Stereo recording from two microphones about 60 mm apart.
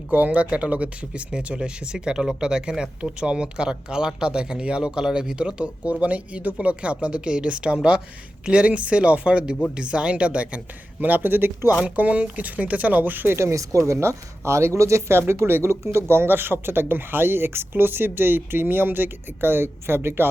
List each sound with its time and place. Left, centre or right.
0.1 s speech: right
11.0 s speech: right
11.8 s speech: right
13.3 s speech: right